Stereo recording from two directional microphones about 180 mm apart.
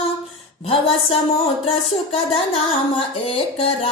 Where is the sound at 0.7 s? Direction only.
30° left (ahead or behind).